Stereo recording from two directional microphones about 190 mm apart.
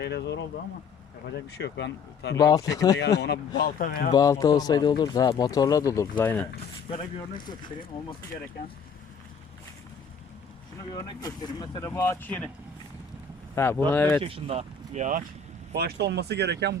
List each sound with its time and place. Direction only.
0.0 s speech: 65° left (ahead or behind)
1.5 s speech: 65° left (ahead or behind)
2.4 s speech: 20° left (ahead or behind)
3.2 s speech: 60° left (ahead or behind)
3.6 s speech: 50° left (ahead or behind)
4.1 s speech: 20° left (ahead or behind)
10.9 s speech: 20° left (ahead or behind)
13.6 s speech: 10° left (ahead or behind)
14.2 s speech: 30° right (ahead or behind)
15.7 s speech: 60° right (ahead or behind)